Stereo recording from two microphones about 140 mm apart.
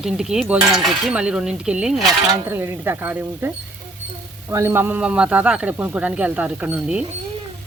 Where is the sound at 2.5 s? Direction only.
15° right (ahead or behind).